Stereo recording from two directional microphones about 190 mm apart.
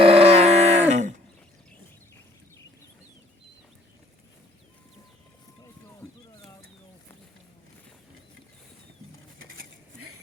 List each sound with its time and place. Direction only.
0.0 s grunt: 30° right (ahead or behind)